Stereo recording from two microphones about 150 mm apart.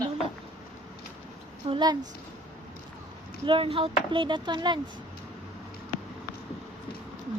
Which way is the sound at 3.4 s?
35° right (ahead or behind).